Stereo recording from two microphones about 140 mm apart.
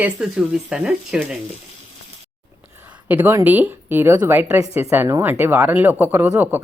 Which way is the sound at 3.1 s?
10° right (ahead or behind).